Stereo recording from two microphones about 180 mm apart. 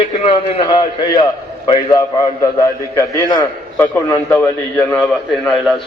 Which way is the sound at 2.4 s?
20° left (ahead or behind).